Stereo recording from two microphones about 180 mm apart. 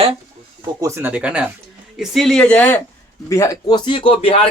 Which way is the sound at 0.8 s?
15° right (ahead or behind).